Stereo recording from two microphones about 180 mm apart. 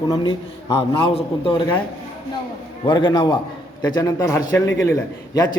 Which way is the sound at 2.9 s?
25° left (ahead or behind).